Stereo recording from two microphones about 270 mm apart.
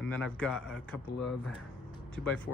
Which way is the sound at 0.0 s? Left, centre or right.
Centre.